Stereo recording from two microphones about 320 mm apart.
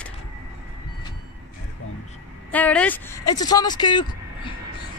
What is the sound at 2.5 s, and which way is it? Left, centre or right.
Speech, centre.